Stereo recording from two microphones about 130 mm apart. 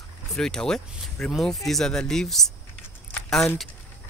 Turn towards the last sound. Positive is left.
turn(degrees=0)  # may be behind; listen again after turning